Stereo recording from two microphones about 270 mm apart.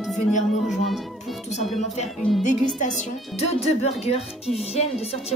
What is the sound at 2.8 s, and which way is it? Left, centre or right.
Speech, left.